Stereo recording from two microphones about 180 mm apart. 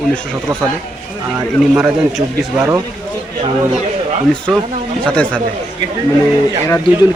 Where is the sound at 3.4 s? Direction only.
35° right (ahead or behind).